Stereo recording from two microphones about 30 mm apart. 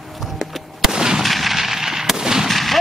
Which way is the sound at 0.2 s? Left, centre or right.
Centre.